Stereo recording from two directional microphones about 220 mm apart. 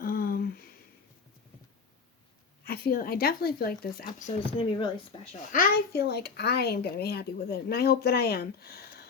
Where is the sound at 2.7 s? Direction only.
40° left (ahead or behind).